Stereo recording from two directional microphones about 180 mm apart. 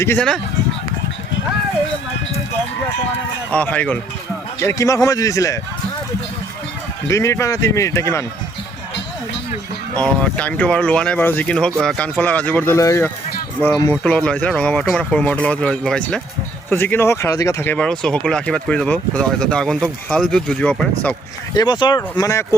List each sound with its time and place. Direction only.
0.0 s speech: 10° left (ahead or behind)
3.5 s speech: 10° left (ahead or behind)
7.1 s speech: 15° left (ahead or behind)
9.9 s speech: 10° left (ahead or behind)
14.0 s speech: 5° left (ahead or behind)
21.5 s speech: 25° left (ahead or behind)